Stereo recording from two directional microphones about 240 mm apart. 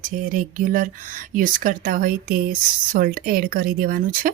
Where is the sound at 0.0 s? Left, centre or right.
Right.